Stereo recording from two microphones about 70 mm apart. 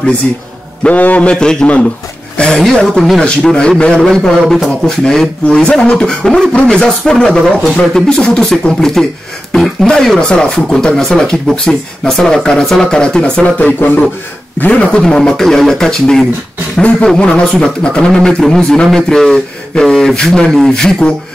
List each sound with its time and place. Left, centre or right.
0.8 s a man's voice: centre